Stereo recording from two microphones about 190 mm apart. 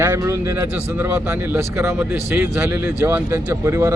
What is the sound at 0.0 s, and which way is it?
Speech, 15° right (ahead or behind).